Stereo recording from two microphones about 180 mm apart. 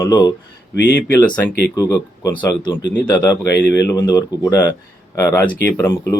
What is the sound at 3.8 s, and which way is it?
Speech, 20° left (ahead or behind).